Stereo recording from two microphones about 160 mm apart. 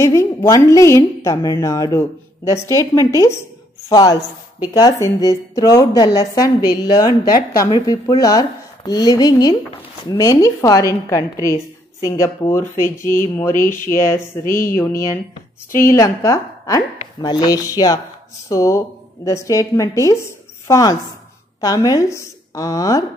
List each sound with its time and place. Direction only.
0.0 s a woman's voice: 15° left (ahead or behind)
14.4 s speech: 60° left (ahead or behind)
14.8 s a woman's voice: 15° left (ahead or behind)